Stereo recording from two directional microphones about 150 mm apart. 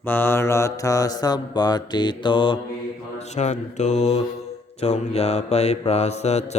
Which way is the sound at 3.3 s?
50° left (ahead or behind).